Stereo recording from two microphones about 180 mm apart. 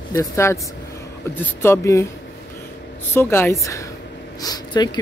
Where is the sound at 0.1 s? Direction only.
15° left (ahead or behind).